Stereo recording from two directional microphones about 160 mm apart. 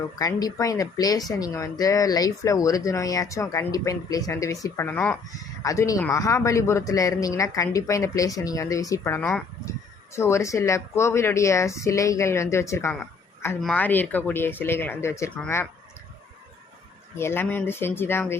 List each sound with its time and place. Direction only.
0.0 s speech: 20° left (ahead or behind)
5.6 s a woman's voice: 20° left (ahead or behind)
13.6 s a woman's voice: 5° left (ahead or behind)
17.2 s a woman's voice: 15° left (ahead or behind)